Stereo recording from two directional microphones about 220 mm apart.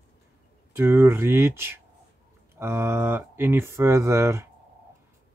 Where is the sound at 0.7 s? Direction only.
10° right (ahead or behind).